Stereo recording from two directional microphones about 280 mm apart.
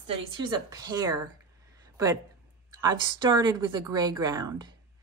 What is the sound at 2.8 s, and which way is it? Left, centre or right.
A woman's voice, centre.